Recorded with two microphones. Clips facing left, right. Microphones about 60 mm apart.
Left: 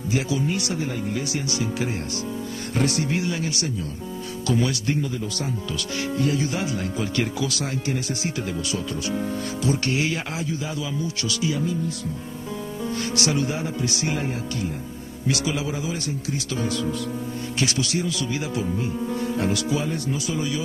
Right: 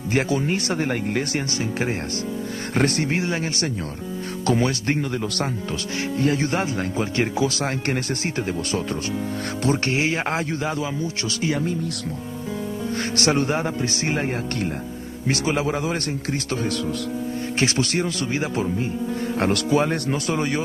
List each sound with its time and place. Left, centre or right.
0.1 s speech: right
0.7 s speech: right
5.0 s speech: right
5.7 s speech: right
10.3 s speech: right
11.4 s speech: right
13.1 s speech: right
15.2 s speech: right
19.3 s speech: right